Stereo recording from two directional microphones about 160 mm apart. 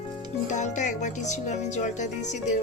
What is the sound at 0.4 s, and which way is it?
Speech, 50° left (ahead or behind).